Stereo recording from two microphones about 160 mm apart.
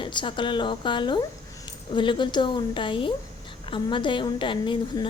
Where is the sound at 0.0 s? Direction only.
30° left (ahead or behind).